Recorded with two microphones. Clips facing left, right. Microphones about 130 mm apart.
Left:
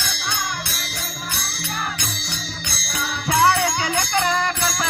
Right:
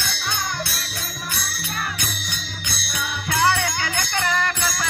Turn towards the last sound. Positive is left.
turn(degrees=20)  # may be behind; listen again after turning